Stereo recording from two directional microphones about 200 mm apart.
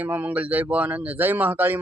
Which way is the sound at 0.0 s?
10° right (ahead or behind).